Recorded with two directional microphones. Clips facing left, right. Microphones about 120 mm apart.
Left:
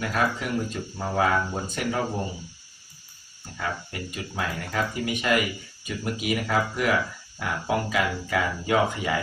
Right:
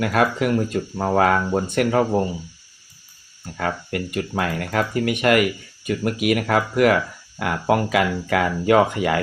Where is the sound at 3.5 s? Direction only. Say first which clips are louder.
Right 7 dB; 65° right (ahead or behind).